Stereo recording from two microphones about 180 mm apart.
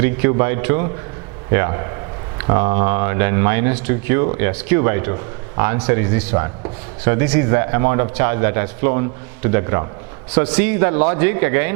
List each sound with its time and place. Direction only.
0.0 s a man's voice: 15° right (ahead or behind)